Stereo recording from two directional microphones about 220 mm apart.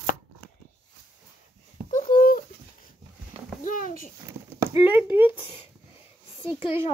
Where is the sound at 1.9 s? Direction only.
35° left (ahead or behind).